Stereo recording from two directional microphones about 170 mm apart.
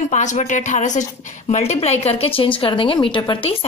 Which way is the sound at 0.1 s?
45° left (ahead or behind).